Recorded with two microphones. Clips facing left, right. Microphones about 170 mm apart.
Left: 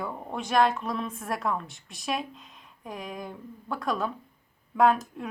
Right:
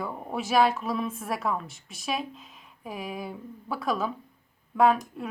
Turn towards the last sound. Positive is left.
turn(degrees=0)  # may be behind; listen again after turning